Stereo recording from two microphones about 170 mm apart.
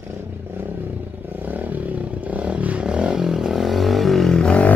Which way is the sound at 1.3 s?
10° right (ahead or behind).